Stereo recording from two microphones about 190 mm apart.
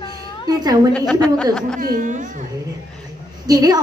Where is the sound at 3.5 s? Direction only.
20° right (ahead or behind).